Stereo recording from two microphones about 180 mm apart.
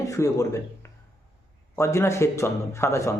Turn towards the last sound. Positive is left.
turn(degrees=15)  # may be behind; listen again after turning